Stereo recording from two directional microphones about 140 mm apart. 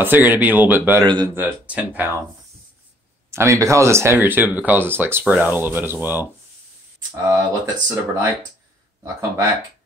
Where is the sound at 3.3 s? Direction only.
20° right (ahead or behind).